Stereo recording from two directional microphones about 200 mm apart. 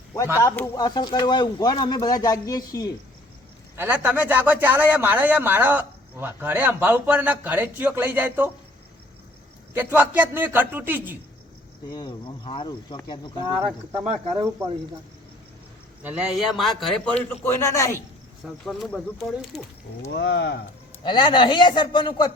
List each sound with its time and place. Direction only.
0.3 s speech: 15° left (ahead or behind)
3.8 s speech: 10° right (ahead or behind)
9.7 s speech: 10° right (ahead or behind)
11.9 s speech: 20° left (ahead or behind)
14.1 s speech: 30° right (ahead or behind)
16.0 s speech: 5° right (ahead or behind)
17.4 s a man's voice: 15° left (ahead or behind)
18.4 s speech: centre (ahead or behind)
20.1 s speech: 60° left (ahead or behind)
21.0 s speech: 20° left (ahead or behind)